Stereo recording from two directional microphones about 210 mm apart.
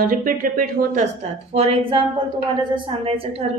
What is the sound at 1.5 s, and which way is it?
A woman's voice, 25° right (ahead or behind).